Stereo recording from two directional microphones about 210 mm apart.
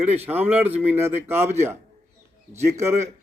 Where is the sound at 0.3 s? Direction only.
10° right (ahead or behind).